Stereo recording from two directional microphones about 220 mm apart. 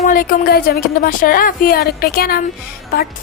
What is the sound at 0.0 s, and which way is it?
A woman's voice, 40° left (ahead or behind).